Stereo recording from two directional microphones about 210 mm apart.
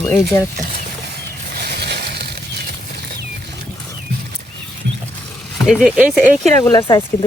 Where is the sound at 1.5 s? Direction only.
50° right (ahead or behind).